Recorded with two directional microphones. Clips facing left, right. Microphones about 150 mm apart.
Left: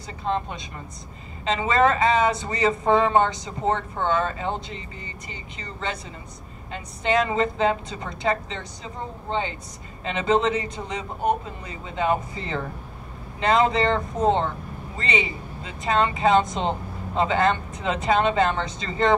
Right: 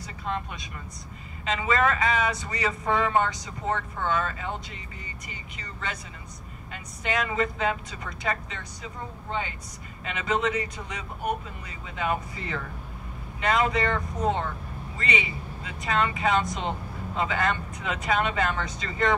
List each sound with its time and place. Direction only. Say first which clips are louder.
0.0 s speech: left 5 dB; 30° left (ahead or behind)